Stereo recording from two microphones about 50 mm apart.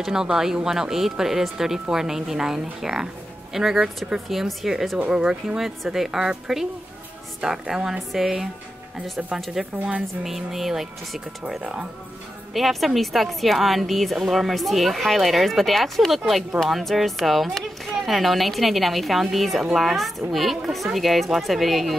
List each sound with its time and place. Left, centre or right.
0.0 s a woman's voice: centre
5.1 s a woman's voice: centre
5.6 s a woman's voice: centre
9.6 s a woman's voice: centre
12.5 s a woman's voice: centre